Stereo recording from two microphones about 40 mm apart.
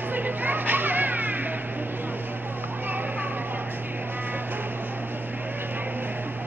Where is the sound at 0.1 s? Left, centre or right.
Right.